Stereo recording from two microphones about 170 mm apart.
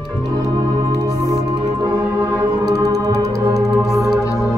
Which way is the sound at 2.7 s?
20° right (ahead or behind).